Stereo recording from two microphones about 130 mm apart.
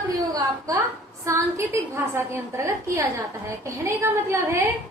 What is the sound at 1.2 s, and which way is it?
A woman's voice, 20° right (ahead or behind).